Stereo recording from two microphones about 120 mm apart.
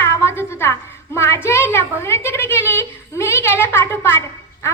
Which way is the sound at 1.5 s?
20° left (ahead or behind).